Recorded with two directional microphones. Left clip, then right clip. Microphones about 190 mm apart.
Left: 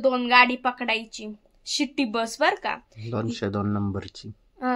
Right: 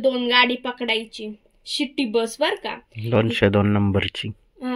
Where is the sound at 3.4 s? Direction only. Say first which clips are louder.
Right 9 dB; 15° right (ahead or behind).